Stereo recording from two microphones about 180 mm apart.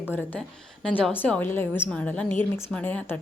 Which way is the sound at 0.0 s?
10° left (ahead or behind).